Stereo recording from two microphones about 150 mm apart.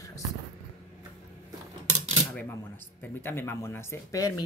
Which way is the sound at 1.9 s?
45° right (ahead or behind).